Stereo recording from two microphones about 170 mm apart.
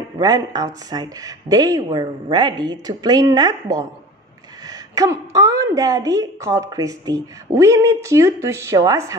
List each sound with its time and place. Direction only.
0.2 s a woman's voice: 20° right (ahead or behind)